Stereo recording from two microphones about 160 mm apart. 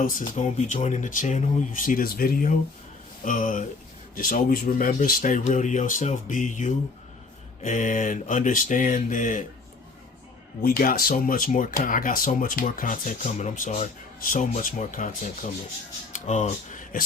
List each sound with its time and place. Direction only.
0.0 s speech: 55° left (ahead or behind)
10.6 s speech: 65° left (ahead or behind); by 17.0 s 50° left (ahead or behind)